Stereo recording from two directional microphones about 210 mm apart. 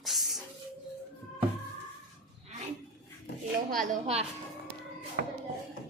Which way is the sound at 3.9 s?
30° right (ahead or behind).